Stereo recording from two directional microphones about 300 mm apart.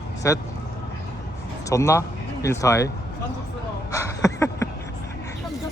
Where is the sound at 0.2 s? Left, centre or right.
Centre.